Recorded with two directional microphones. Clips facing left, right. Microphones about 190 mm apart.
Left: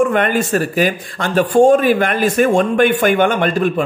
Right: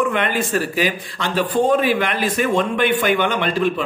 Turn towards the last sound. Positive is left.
turn(degrees=50)  # may be behind; listen again after turning